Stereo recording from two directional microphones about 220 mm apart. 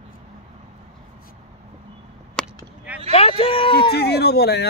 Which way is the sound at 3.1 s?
25° left (ahead or behind).